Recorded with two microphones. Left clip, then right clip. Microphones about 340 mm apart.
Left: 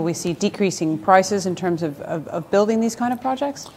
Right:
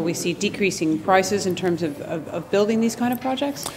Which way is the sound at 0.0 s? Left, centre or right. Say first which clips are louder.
Left 1 dB; left.